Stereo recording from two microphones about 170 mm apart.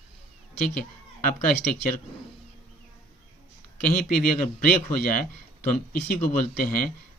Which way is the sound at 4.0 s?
60° left (ahead or behind).